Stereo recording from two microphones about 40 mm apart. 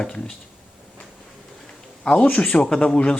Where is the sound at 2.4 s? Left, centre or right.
Left.